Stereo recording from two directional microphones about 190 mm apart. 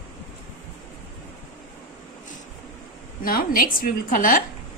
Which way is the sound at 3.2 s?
50° left (ahead or behind).